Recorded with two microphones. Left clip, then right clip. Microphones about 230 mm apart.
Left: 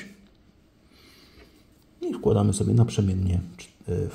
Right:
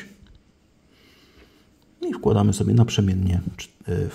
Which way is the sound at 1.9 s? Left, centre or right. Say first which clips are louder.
Right 2 dB; right.